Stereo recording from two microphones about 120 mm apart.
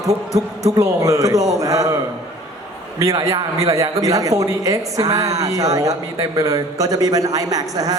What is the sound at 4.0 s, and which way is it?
A man's voice, 30° right (ahead or behind).